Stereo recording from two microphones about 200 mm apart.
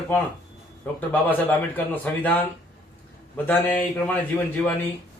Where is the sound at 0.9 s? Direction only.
5° left (ahead or behind).